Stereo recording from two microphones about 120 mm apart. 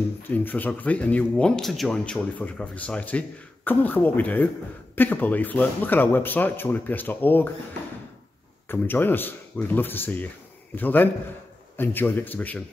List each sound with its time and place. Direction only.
0.2 s speech: 15° left (ahead or behind)
8.6 s speech: 15° left (ahead or behind)